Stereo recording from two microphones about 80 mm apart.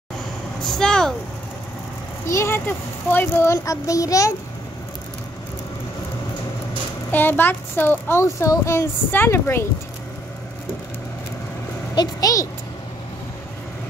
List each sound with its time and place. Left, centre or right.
0.6 s speech: centre
2.2 s a child's voice: left
7.1 s a child's voice: left
11.9 s a sound: left